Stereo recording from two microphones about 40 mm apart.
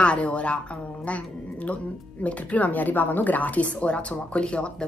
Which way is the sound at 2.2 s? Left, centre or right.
Left.